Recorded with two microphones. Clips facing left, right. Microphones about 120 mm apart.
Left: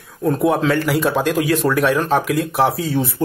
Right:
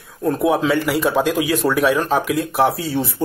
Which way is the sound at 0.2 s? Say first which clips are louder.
Left 1 dB; centre (ahead or behind).